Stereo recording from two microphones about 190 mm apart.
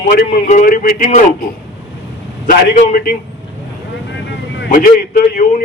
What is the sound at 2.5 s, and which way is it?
Speech, 45° left (ahead or behind).